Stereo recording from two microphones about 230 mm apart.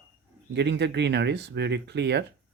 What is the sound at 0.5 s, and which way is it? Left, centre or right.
Speech, right.